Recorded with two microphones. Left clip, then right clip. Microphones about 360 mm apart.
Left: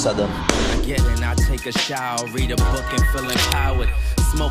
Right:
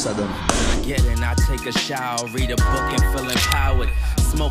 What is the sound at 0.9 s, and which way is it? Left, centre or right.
Music, centre.